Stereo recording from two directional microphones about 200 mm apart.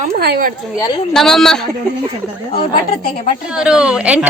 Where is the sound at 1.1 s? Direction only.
Centre (ahead or behind).